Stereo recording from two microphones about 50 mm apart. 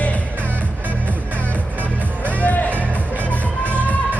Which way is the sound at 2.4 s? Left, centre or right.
Left.